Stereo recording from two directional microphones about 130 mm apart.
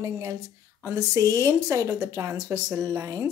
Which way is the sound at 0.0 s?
25° right (ahead or behind).